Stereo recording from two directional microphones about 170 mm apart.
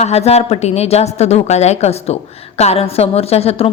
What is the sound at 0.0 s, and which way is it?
A woman's voice, 40° left (ahead or behind).